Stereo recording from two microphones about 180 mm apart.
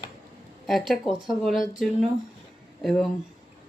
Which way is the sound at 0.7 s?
Centre (ahead or behind).